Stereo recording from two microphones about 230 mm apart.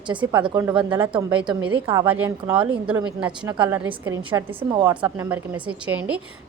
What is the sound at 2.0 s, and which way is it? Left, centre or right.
A woman's voice, centre.